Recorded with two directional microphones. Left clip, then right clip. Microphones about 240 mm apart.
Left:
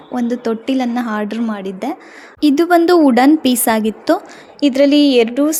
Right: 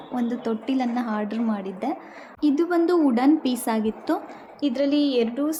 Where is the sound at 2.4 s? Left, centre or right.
Left.